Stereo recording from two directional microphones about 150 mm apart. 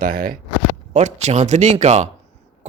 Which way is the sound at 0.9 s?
50° right (ahead or behind).